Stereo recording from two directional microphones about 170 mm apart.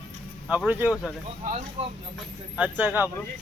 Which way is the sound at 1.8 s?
40° right (ahead or behind).